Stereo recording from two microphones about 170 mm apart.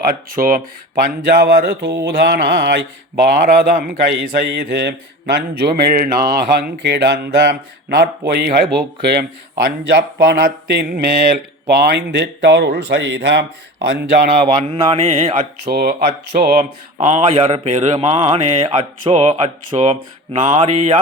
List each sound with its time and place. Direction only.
0.1 s speech: 60° right (ahead or behind)
1.0 s speech: 65° right (ahead or behind); by 13.4 s 90° right
13.8 s speech: 70° right (ahead or behind)
14.3 s mantra: 35° right (ahead or behind)
15.6 s speech: 55° right (ahead or behind); by 17.8 s 40° right (ahead or behind)
18.0 s mantra: 35° right (ahead or behind)
19.1 s mantra: 40° right (ahead or behind)